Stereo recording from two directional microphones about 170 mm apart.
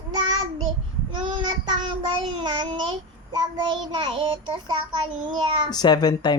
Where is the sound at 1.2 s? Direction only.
30° right (ahead or behind).